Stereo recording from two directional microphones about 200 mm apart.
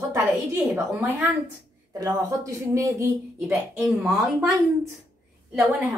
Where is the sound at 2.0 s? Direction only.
15° right (ahead or behind).